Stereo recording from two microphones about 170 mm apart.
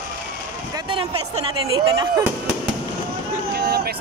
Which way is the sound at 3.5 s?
70° right (ahead or behind).